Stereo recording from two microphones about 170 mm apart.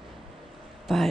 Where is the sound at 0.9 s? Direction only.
Centre (ahead or behind).